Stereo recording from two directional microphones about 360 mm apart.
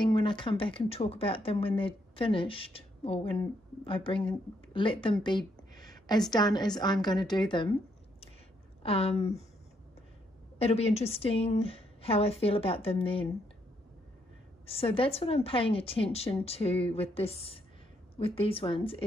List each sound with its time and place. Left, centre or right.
0.0 s speech: centre
5.4 s a sound: centre
6.2 s speech: centre
8.8 s speech: centre
10.6 s speech: centre
14.7 s speech: centre